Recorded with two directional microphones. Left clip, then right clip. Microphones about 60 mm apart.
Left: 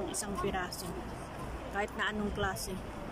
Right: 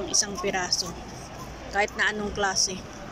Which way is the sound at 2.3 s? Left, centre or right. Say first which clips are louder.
Right 10 dB; left.